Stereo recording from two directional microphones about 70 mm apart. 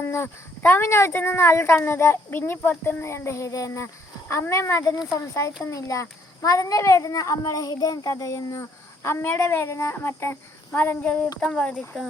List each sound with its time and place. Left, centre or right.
0.0 s a child's voice: left
9.0 s speech: left
10.7 s speech: left